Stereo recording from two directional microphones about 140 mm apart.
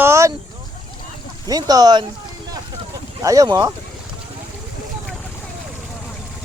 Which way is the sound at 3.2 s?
25° right (ahead or behind).